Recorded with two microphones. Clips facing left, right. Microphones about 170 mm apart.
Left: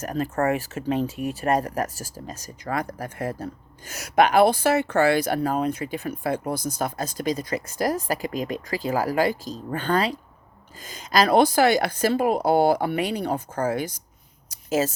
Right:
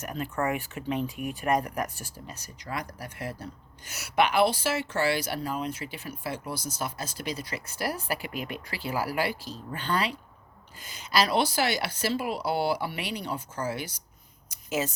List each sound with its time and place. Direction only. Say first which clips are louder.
0.0 s speech: left 6 dB; 40° left (ahead or behind)
2.6 s speech: left 8 dB; 55° left (ahead or behind)